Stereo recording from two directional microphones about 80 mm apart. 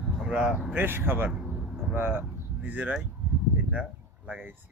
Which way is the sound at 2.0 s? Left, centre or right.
Right.